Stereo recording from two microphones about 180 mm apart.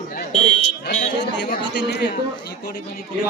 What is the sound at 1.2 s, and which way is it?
Chatter, 75° left (ahead or behind).